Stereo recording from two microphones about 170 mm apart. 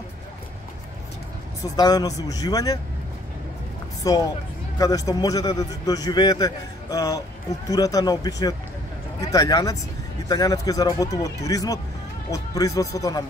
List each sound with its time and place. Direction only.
1.6 s a man's voice: 20° left (ahead or behind)
4.0 s a man's voice: 20° left (ahead or behind)